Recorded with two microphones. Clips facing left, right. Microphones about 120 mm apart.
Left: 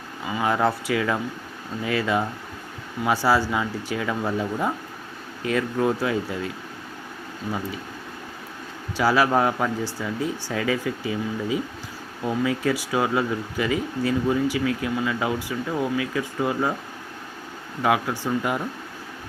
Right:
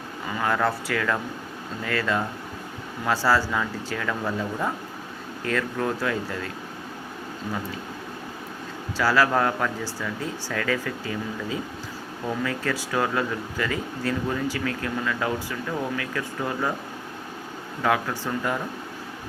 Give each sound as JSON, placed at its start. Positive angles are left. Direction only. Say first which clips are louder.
{"t": 0.3, "sound": "speech", "louder": "left 2 dB", "side_deg": 15}
{"t": 9.0, "sound": "speech", "louder": "left 2 dB", "side_deg": 15}
{"t": 17.8, "sound": "speech", "louder": "left 2 dB", "side_deg": 15}